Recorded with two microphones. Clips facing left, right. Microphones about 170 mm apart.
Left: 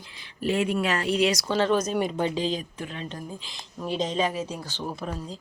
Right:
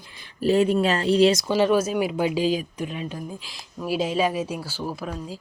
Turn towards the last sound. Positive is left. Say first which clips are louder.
# right 2 dB
turn(degrees=0)  # may be behind; listen again after turning